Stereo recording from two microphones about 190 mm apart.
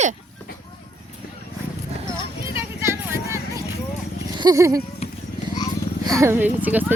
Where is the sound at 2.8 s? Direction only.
15° right (ahead or behind).